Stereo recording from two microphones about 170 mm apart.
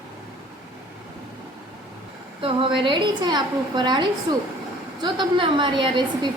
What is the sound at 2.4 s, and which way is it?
A woman's voice, 30° right (ahead or behind).